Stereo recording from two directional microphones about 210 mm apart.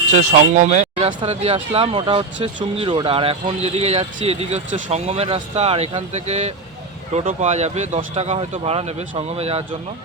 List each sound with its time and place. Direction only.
0.2 s speech: 35° right (ahead or behind)